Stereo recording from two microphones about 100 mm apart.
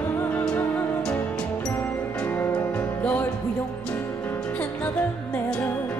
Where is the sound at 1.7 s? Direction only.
25° left (ahead or behind).